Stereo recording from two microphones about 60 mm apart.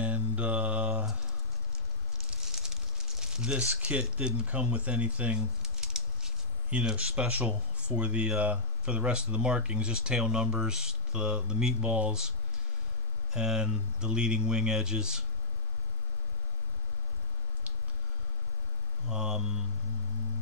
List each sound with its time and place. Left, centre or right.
0.0 s mantra: right
2.6 s crumpling: centre
4.0 s speech: centre
5.4 s a sound: centre
7.5 s speech: centre
13.3 s speech: centre
19.0 s speech: centre